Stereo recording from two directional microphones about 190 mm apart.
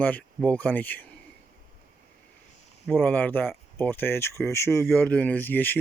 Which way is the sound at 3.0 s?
10° left (ahead or behind).